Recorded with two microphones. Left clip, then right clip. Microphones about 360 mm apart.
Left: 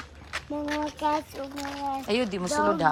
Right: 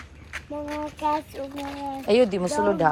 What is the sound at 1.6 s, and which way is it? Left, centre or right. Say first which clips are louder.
Speech: left 3 dB; centre.